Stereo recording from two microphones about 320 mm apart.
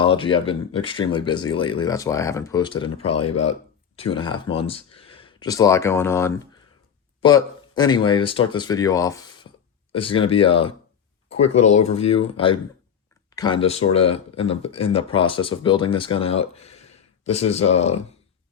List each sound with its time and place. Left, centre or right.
0.0 s speech: centre
3.2 s speech: left
4.1 s speech: centre
11.9 s speech: centre